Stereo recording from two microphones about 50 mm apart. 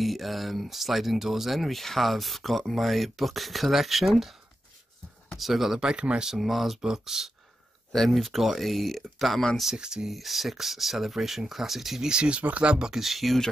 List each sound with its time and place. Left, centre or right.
0.0 s speech: centre
5.9 s speech: right
6.2 s speech: centre
7.9 s speech: centre
9.8 s speech: centre
10.1 s speech: centre
12.1 s speech: right; by 13.4 s centre